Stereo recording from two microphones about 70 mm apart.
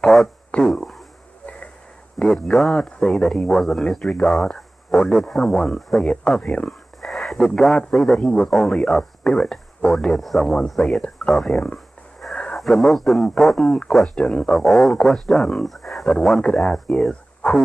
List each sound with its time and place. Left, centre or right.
0.0 s speech: centre
0.5 s speech: centre
2.1 s speech: centre
7.0 s speech: centre
14.1 s speech: centre
14.5 s speech: centre
17.1 s a sound: centre